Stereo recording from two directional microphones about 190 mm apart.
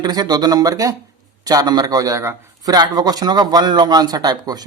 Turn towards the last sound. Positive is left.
turn(degrees=-20)  # may be behind; listen again after turning